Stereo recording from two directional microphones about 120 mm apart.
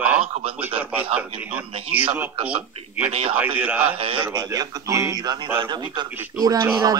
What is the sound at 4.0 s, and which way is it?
Speech, 50° right (ahead or behind).